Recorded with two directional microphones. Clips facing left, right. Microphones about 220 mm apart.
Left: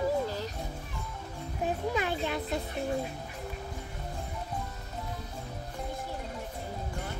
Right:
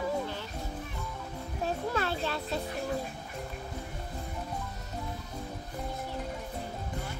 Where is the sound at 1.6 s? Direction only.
15° left (ahead or behind).